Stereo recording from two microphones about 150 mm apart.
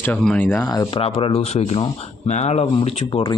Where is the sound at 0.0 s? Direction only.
5° left (ahead or behind).